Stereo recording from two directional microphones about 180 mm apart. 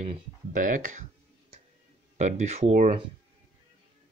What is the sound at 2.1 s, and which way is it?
Speech, 40° right (ahead or behind).